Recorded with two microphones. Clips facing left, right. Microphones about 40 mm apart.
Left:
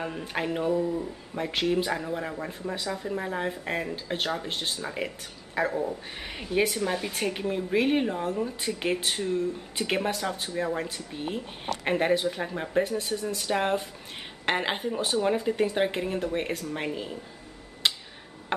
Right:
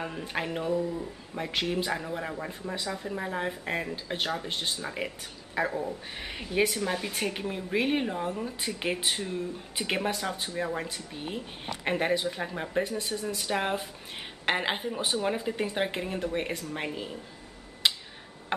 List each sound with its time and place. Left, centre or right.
0.0 s speech: centre
17.8 s tick-tock: centre